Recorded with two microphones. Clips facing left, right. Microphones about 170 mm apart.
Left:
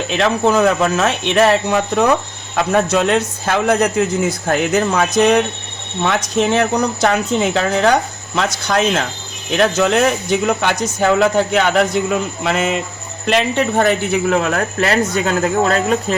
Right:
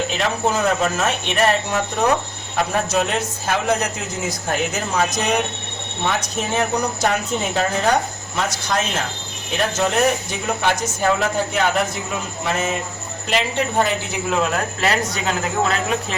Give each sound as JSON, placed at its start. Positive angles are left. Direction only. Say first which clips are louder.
{"t": 0.2, "sound": "a man's voice", "louder": "left 8 dB", "side_deg": 65}
{"t": 9.5, "sound": "a man's voice", "louder": "left 6 dB", "side_deg": 80}